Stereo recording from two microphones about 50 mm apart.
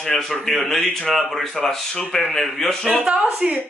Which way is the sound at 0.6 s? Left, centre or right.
Left.